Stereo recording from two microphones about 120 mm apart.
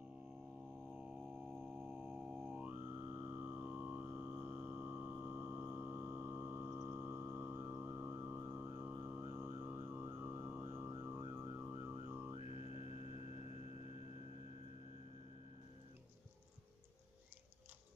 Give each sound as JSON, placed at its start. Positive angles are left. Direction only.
{"t": 0.9, "sound": "music", "side_deg": -10}
{"t": 12.4, "sound": "music", "side_deg": 60}